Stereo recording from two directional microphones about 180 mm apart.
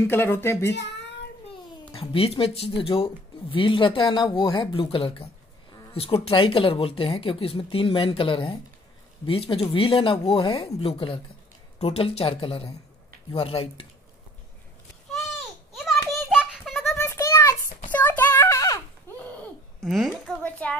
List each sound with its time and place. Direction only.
0.0 s speech: 10° left (ahead or behind)
1.9 s speech: 30° left (ahead or behind)
16.3 s a sound: centre (ahead or behind)
17.0 s a sound: 15° left (ahead or behind)
19.1 s laughter: 10° left (ahead or behind)
19.8 s a woman's voice: centre (ahead or behind)